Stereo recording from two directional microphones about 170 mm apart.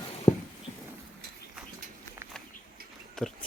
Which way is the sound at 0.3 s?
40° left (ahead or behind).